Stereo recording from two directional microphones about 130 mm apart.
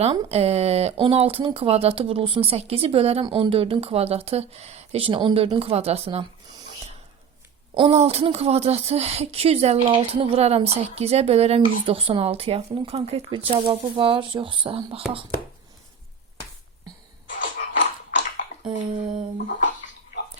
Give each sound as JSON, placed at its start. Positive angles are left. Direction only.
{"t": 0.0, "sound": "speech", "side_deg": -50}
{"t": 7.8, "sound": "speech", "side_deg": -50}
{"t": 17.2, "sound": "music", "side_deg": 85}
{"t": 18.6, "sound": "a sound", "side_deg": -40}
{"t": 19.5, "sound": "speech", "side_deg": 80}